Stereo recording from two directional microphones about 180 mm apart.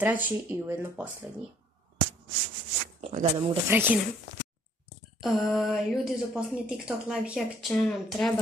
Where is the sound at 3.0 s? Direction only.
35° right (ahead or behind).